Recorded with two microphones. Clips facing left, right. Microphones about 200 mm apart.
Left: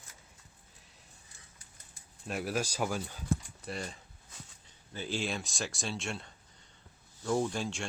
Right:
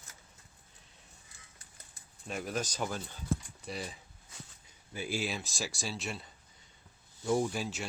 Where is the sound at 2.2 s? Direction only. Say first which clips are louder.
Left 2 dB; 5° left (ahead or behind).